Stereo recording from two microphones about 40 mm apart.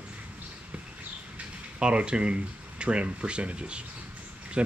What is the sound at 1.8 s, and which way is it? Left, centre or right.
Speech, right.